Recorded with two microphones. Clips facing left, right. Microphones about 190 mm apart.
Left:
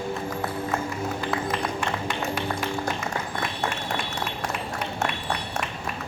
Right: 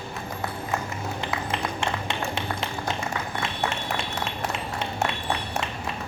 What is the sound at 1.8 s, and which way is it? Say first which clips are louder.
Music: left 1 dB; 25° right (ahead or behind).